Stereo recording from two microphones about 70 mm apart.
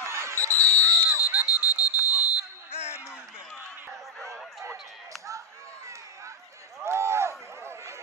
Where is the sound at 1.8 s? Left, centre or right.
Centre.